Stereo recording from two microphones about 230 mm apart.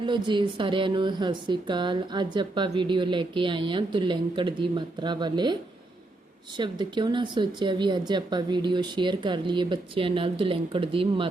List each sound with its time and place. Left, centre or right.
0.0 s speech: centre
6.6 s speech: centre